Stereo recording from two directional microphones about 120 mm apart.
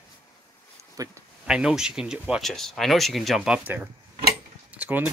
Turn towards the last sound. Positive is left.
turn(degrees=-10)  # may be behind; listen again after turning